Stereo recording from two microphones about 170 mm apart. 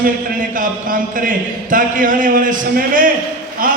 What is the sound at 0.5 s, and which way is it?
A man's voice, 55° right (ahead or behind).